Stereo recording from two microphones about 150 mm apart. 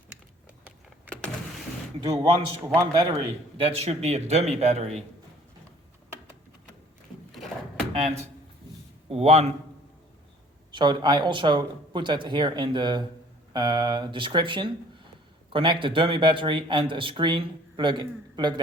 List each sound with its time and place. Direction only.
2.0 s a man's voice: 35° right (ahead or behind)
3.6 s a man's voice: 45° right (ahead or behind)
7.3 s a sound: centre (ahead or behind)
9.0 s a man's voice: 45° right (ahead or behind)
10.7 s speech: 30° right (ahead or behind)